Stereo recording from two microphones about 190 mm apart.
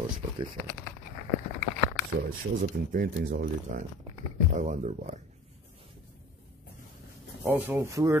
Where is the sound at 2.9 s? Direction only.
45° right (ahead or behind).